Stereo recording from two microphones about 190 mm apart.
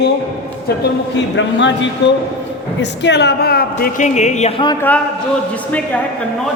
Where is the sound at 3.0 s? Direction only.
65° left (ahead or behind); by 4.8 s 25° left (ahead or behind).